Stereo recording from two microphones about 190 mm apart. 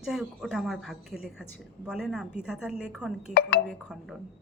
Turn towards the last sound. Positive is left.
turn(degrees=0)  # may be behind; listen again after turning